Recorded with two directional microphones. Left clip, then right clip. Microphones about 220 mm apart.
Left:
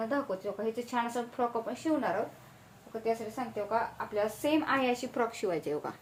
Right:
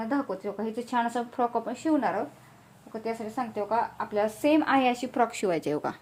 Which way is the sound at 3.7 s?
55° right (ahead or behind).